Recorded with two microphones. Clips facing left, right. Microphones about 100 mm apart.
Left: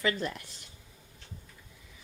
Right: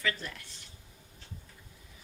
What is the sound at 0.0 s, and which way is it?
Speech, 25° left (ahead or behind).